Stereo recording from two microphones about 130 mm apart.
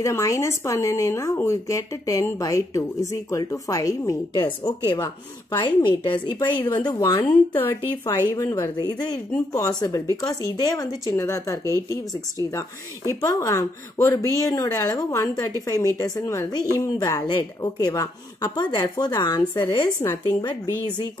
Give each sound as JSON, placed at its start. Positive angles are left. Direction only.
{"t": 0.0, "sound": "speech", "side_deg": 25}
{"t": 4.4, "sound": "a woman's voice", "side_deg": 40}
{"t": 6.6, "sound": "speech", "side_deg": 15}
{"t": 6.9, "sound": "a woman's voice", "side_deg": 30}
{"t": 7.2, "sound": "speech", "side_deg": 15}
{"t": 7.9, "sound": "a woman's voice", "side_deg": 30}
{"t": 19.5, "sound": "speech", "side_deg": 20}
{"t": 20.2, "sound": "a woman's voice", "side_deg": 40}